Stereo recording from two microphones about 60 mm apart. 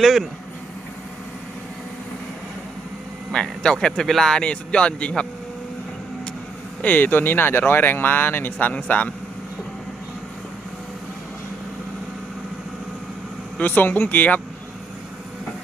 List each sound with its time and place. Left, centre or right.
0.0 s speech: centre
3.3 s speech: centre
6.8 s speech: left
8.7 s speech: left
13.6 s speech: left